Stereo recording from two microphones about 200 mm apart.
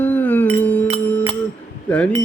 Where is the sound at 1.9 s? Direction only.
5° left (ahead or behind).